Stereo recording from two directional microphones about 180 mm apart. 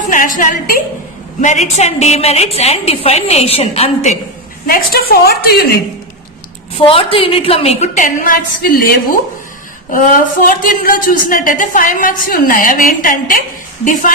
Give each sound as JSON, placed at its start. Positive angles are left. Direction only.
{"t": 0.1, "sound": "a woman's voice", "side_deg": 50}
{"t": 4.6, "sound": "a woman's voice", "side_deg": 55}
{"t": 6.7, "sound": "a woman's voice", "side_deg": 30}